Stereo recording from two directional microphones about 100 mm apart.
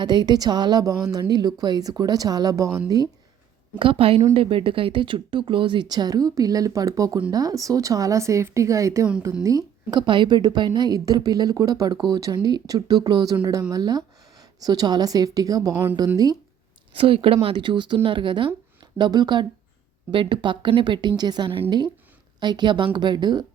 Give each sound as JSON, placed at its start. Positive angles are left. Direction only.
{"t": 0.0, "sound": "a woman's voice", "side_deg": -45}
{"t": 3.8, "sound": "a woman's voice", "side_deg": -65}
{"t": 10.1, "sound": "a woman's voice", "side_deg": -50}
{"t": 15.7, "sound": "a woman's voice", "side_deg": -15}
{"t": 16.1, "sound": "a woman's voice", "side_deg": -40}
{"t": 16.9, "sound": "a woman's voice", "side_deg": -65}